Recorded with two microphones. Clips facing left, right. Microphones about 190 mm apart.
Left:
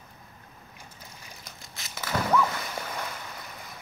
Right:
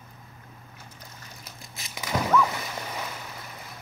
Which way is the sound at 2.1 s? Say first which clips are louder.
Right 1 dB; 15° right (ahead or behind).